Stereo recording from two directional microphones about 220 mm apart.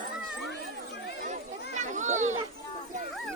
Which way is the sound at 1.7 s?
35° right (ahead or behind).